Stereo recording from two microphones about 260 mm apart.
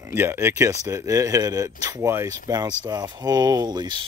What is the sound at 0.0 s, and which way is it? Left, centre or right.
Speech, centre.